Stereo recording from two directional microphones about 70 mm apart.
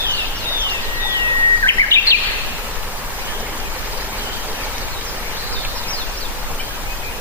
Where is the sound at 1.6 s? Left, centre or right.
Left.